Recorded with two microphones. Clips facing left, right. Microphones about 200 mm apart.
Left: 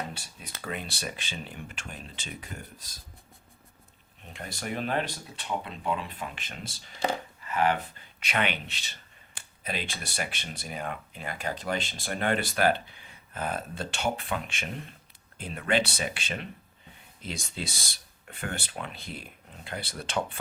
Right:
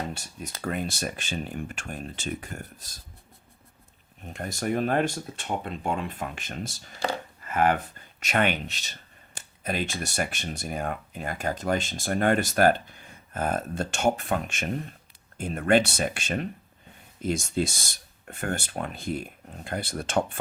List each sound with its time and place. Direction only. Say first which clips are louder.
0.1 s speech: right 6 dB; 45° right (ahead or behind)
4.3 s speech: right 7 dB; 45° right (ahead or behind)
7.4 s a sound: right 3 dB; 50° right (ahead or behind)
8.2 s speech: right 5 dB; 45° right (ahead or behind)